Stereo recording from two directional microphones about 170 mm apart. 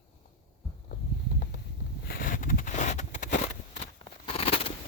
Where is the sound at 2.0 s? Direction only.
60° left (ahead or behind).